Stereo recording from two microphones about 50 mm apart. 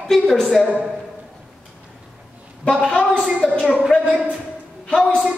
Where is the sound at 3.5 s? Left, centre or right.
Left.